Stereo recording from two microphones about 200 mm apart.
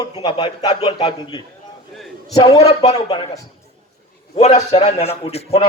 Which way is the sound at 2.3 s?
20° left (ahead or behind).